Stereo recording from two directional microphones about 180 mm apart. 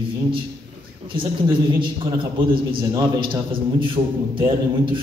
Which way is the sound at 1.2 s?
25° right (ahead or behind).